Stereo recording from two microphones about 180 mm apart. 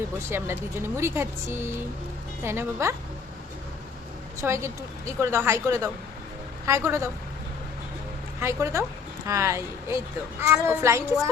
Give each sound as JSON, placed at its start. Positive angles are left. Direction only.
{"t": 0.3, "sound": "speech", "side_deg": -15}
{"t": 4.4, "sound": "speech", "side_deg": -15}
{"t": 8.4, "sound": "speech", "side_deg": -15}